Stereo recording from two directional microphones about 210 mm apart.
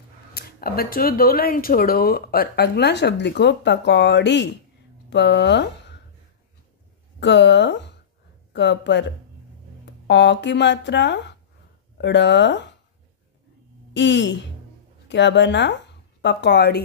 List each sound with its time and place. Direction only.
0.3 s speech: 45° left (ahead or behind)
7.2 s a woman's voice: 55° left (ahead or behind)
10.0 s speech: 55° left (ahead or behind)
13.9 s speech: 55° left (ahead or behind)